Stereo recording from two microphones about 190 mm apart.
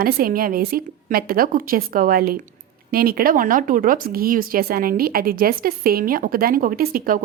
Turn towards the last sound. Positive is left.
turn(degrees=-50)  # may be behind; listen again after turning